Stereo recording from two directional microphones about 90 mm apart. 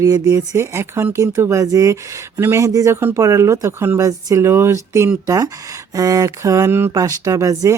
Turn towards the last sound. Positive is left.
turn(degrees=-35)  # may be behind; listen again after turning